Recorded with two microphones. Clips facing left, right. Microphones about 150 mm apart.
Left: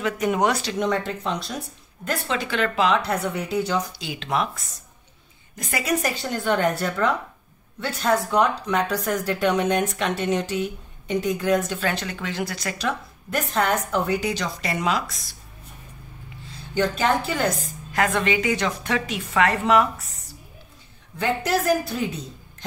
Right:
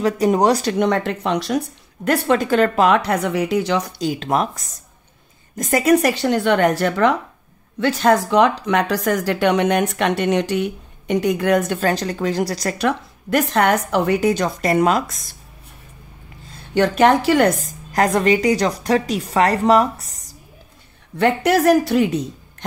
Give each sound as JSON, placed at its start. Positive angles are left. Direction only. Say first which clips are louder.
{"t": 0.0, "sound": "speech", "louder": "right 6 dB", "side_deg": -35}
{"t": 0.7, "sound": "speech", "louder": "right 6 dB", "side_deg": -65}
{"t": 2.0, "sound": "speech", "louder": "right 10 dB", "side_deg": -50}
{"t": 3.0, "sound": "speech", "louder": "right 6 dB", "side_deg": -75}
{"t": 4.0, "sound": "speech", "louder": "right 6 dB", "side_deg": -45}
{"t": 5.9, "sound": "speech", "louder": "right 9 dB", "side_deg": -70}
{"t": 11.8, "sound": "speech", "louder": "right 7 dB", "side_deg": -40}
{"t": 12.7, "sound": "speech", "louder": "right 7 dB", "side_deg": -70}
{"t": 14.2, "sound": "speech", "louder": "right 9 dB", "side_deg": -50}
{"t": 16.7, "sound": "speech", "louder": "right 7 dB", "side_deg": -70}
{"t": 17.6, "sound": "speech", "louder": "right 5 dB", "side_deg": -40}
{"t": 21.2, "sound": "speech", "louder": "right 7 dB", "side_deg": -70}